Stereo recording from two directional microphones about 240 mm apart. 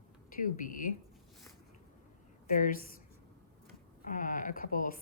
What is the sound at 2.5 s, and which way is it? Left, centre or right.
Speech, left.